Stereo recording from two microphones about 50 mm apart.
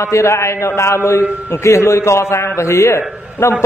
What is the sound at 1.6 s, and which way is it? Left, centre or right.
A man's voice, left.